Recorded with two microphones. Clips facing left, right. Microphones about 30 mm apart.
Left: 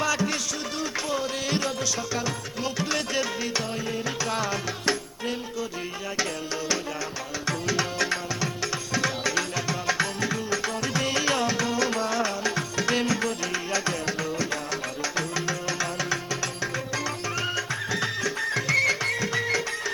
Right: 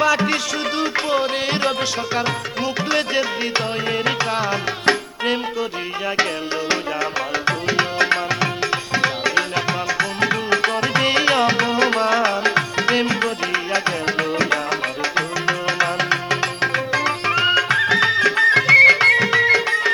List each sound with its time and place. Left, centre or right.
0.0 s music: right
2.9 s music: right
4.9 s music: right
7.4 s tabla: right
14.3 s music: right